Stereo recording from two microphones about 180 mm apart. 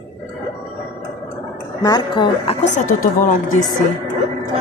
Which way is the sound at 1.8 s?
25° left (ahead or behind).